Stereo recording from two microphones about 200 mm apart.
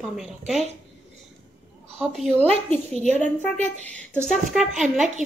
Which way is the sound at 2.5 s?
30° right (ahead or behind).